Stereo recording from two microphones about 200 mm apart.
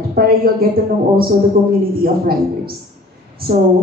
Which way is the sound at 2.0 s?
50° right (ahead or behind).